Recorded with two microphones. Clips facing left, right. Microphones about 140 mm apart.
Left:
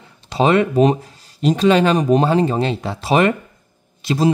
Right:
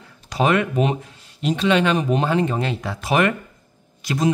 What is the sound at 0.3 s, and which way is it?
Speech, 30° left (ahead or behind).